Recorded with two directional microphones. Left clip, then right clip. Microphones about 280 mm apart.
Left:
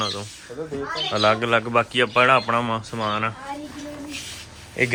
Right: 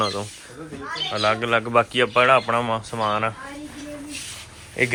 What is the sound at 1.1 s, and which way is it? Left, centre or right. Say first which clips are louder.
Speech: left 2 dB; centre.